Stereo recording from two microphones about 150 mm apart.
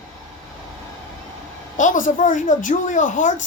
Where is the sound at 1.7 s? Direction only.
60° left (ahead or behind).